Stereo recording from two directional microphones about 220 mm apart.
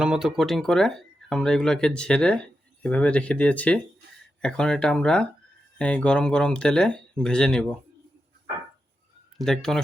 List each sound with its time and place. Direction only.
0.0 s speech: 5° right (ahead or behind)
9.4 s speech: centre (ahead or behind)